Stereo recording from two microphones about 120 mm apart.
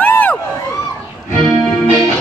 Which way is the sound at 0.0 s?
15° left (ahead or behind).